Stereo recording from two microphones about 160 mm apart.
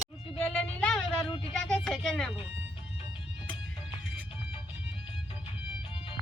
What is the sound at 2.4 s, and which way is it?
Music, 35° left (ahead or behind).